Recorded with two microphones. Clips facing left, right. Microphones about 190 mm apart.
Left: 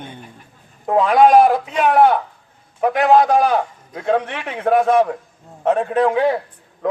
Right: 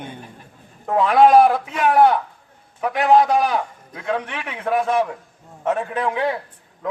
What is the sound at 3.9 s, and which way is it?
A man's voice, 30° left (ahead or behind).